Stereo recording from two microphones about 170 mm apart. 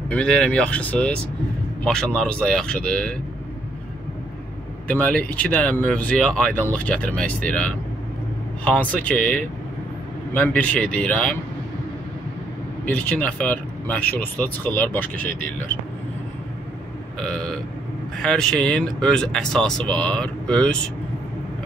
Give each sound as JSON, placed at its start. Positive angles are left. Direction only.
{"t": 0.1, "sound": "speech", "side_deg": 5}
{"t": 4.8, "sound": "speech", "side_deg": 10}
{"t": 12.8, "sound": "speech", "side_deg": 10}
{"t": 17.2, "sound": "speech", "side_deg": 5}